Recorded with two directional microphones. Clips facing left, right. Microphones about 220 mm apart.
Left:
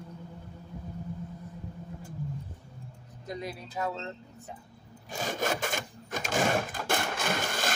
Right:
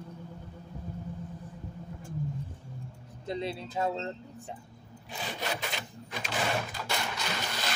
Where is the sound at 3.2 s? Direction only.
25° right (ahead or behind).